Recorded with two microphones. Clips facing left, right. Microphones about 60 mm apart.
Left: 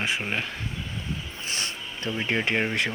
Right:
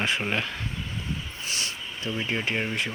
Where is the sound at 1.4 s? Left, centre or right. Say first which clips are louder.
Left 1 dB; left.